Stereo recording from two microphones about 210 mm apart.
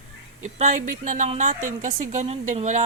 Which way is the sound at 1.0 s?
35° right (ahead or behind).